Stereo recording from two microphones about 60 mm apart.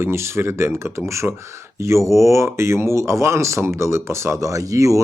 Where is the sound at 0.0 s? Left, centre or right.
Right.